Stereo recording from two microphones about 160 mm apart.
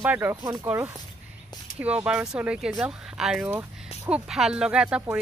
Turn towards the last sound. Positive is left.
turn(degrees=-5)  # may be behind; listen again after turning